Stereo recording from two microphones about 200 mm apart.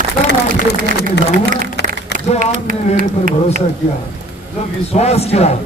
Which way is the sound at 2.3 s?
45° right (ahead or behind).